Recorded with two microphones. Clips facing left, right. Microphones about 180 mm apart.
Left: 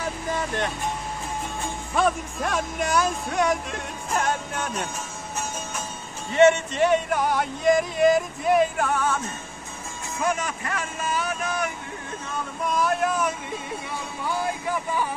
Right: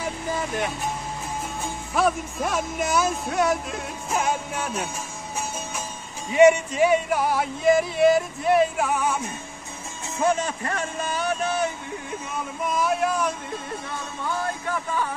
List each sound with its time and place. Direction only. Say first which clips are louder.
0.0 s vehicle: even; 10° right (ahead or behind)
2.0 s speech: right 1 dB; 5° right (ahead or behind)
6.3 s speech: right 2 dB; 10° right (ahead or behind)
10.1 s speech: right 3 dB; 30° right (ahead or behind)
12.6 s a sound: even; centre (ahead or behind)
14.2 s music: left 1 dB; 10° left (ahead or behind)